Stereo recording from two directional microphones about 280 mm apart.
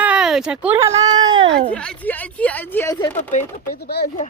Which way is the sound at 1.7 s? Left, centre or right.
Centre.